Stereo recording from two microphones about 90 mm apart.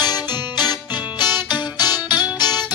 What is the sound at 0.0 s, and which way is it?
Music, 50° left (ahead or behind).